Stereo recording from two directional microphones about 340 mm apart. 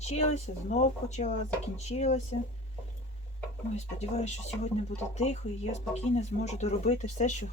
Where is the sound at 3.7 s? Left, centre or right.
Centre.